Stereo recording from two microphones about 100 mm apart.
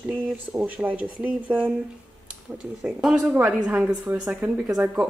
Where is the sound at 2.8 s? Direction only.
5° right (ahead or behind).